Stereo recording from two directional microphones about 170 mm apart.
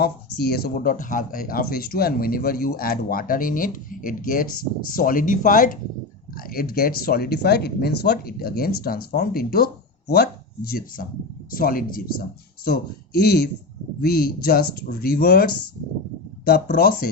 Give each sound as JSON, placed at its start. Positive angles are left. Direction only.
{"t": 0.0, "sound": "speech", "side_deg": 70}